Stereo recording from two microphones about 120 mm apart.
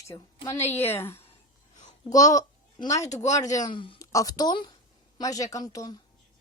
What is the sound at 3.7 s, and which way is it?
Speech, 45° left (ahead or behind).